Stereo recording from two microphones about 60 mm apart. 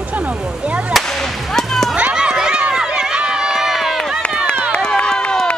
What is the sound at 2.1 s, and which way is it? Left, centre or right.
Run, centre.